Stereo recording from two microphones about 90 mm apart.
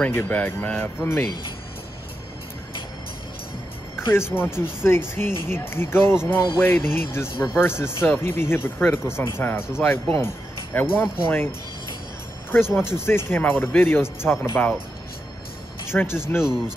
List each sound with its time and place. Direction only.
0.0 s speech: 20° left (ahead or behind)
3.9 s speech: 25° left (ahead or behind)
15.9 s speech: 25° left (ahead or behind)
16.3 s speech: 5° right (ahead or behind)